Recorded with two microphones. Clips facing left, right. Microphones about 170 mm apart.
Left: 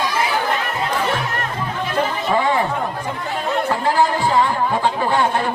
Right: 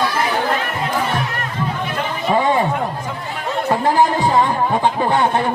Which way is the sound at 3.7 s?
20° right (ahead or behind).